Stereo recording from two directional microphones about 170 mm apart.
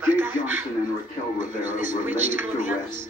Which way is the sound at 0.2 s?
15° right (ahead or behind).